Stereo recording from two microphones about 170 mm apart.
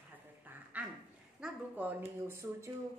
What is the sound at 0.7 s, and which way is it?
A woman's voice, 10° right (ahead or behind).